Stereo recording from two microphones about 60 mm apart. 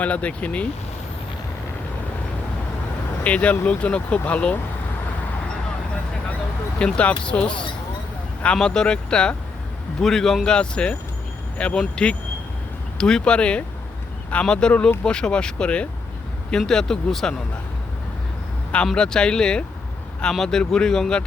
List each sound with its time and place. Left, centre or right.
0.0 s speech: left
3.2 s speech: left
6.7 s speech: centre
18.9 s speech: centre